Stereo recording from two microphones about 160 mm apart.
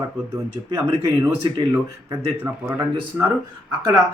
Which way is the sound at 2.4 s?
10° right (ahead or behind).